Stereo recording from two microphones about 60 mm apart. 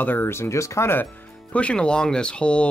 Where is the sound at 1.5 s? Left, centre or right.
Centre.